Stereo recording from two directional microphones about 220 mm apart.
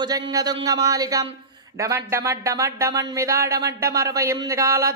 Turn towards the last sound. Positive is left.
turn(degrees=-15)  # may be behind; listen again after turning